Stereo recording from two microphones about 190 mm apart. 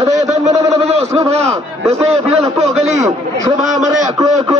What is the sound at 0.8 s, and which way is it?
Speech, 35° right (ahead or behind).